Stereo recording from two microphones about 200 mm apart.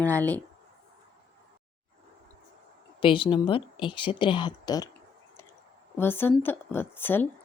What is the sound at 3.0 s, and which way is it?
Speech, 25° left (ahead or behind).